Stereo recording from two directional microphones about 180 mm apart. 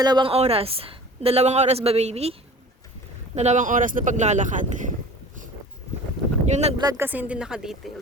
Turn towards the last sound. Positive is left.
turn(degrees=-5)  # may be behind; listen again after turning